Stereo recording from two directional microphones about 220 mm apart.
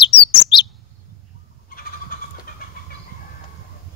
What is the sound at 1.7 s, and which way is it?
Vehicle, 40° left (ahead or behind).